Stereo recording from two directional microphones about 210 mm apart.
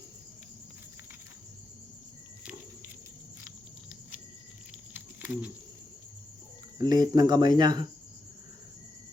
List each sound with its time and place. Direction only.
2.4 s cricket: 5° right (ahead or behind)
4.9 s a sound: 5° right (ahead or behind)
6.7 s cricket: 20° right (ahead or behind)